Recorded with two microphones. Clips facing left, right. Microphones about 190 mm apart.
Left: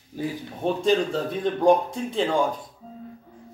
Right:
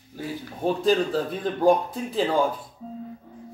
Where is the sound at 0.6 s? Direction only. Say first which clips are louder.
Even; centre (ahead or behind).